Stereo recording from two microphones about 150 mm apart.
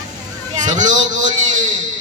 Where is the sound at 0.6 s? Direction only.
55° right (ahead or behind).